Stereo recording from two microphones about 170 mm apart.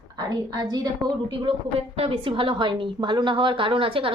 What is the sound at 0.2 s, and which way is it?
A woman's voice, 25° right (ahead or behind).